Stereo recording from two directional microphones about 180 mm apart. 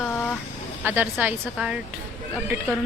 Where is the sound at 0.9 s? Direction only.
10° right (ahead or behind).